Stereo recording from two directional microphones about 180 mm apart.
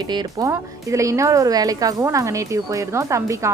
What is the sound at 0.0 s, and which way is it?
A woman's voice, 25° right (ahead or behind).